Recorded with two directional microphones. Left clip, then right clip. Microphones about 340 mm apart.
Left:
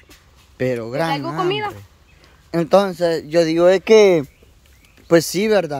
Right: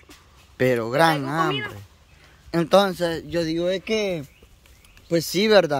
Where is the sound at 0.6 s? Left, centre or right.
Centre.